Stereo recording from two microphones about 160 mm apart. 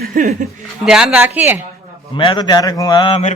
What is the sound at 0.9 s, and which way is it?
Speech, 5° right (ahead or behind).